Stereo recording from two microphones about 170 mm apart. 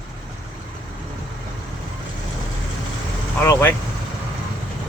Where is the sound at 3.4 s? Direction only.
15° left (ahead or behind).